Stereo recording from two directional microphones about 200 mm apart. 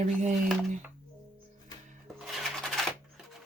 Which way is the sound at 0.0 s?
35° right (ahead or behind).